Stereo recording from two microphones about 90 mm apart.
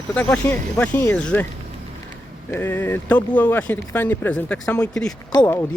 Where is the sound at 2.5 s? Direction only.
25° left (ahead or behind).